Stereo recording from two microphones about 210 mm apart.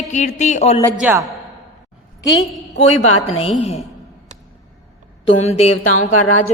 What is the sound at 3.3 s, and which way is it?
Speech, 30° left (ahead or behind).